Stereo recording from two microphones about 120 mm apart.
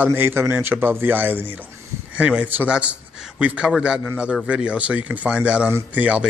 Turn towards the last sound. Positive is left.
turn(degrees=-10)  # may be behind; listen again after turning